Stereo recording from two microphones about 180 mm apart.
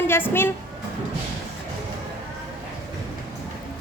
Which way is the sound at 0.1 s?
10° left (ahead or behind).